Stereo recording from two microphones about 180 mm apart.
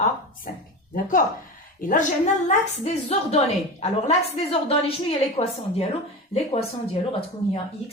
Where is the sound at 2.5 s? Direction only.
40° left (ahead or behind).